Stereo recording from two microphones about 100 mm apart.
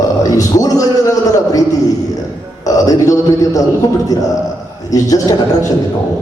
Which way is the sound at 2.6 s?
35° left (ahead or behind).